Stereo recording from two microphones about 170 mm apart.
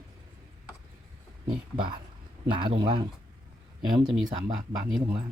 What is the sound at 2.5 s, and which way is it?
Speech, 30° right (ahead or behind).